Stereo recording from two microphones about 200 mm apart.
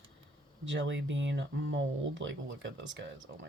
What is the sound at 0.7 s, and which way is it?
Speech, 65° right (ahead or behind).